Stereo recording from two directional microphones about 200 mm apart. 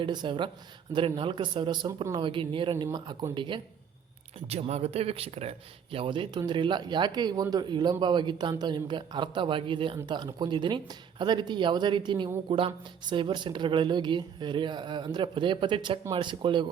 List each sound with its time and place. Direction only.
0.0 s a man's voice: 20° right (ahead or behind)